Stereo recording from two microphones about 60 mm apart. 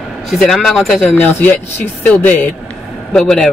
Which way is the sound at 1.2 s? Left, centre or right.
Left.